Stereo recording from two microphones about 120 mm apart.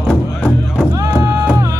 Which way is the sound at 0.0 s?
10° left (ahead or behind).